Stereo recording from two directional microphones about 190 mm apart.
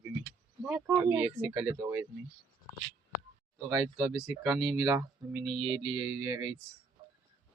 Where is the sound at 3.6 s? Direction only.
20° right (ahead or behind).